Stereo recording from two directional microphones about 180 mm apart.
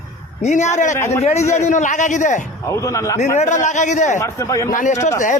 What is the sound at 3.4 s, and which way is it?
Speech, 40° left (ahead or behind).